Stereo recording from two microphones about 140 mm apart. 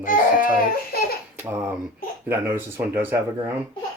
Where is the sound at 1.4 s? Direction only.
15° right (ahead or behind).